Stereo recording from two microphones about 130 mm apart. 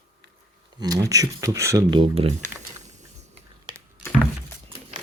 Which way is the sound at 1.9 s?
45° right (ahead or behind).